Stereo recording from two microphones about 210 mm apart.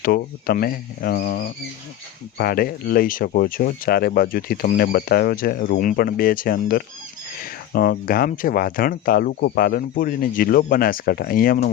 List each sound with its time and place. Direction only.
0.0 s speech: 45° left (ahead or behind)